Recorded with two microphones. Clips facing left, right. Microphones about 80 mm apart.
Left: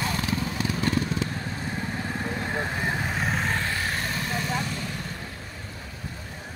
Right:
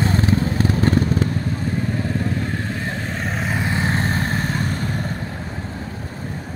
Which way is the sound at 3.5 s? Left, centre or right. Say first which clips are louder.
Right 6 dB; right.